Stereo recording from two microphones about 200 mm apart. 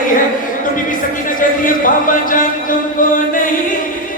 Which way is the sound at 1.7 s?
40° left (ahead or behind).